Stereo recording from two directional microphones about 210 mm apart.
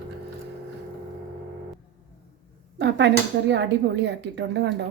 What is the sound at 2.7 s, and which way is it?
Dishes, 55° right (ahead or behind).